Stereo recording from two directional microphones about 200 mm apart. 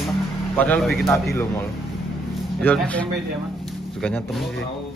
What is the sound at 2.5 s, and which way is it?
Speech, 5° left (ahead or behind).